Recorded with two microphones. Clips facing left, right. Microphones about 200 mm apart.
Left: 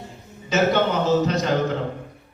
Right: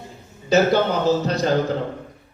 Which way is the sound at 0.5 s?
35° right (ahead or behind).